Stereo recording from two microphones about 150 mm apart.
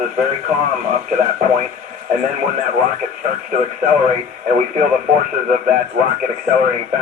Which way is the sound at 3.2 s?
65° right (ahead or behind).